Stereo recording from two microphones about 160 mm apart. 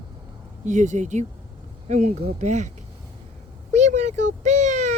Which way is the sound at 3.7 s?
45° right (ahead or behind).